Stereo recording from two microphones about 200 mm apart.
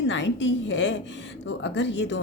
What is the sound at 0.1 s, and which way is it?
A woman's voice, 65° left (ahead or behind).